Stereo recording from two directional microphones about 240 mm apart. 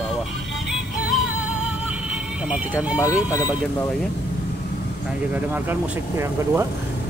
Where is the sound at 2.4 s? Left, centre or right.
Centre.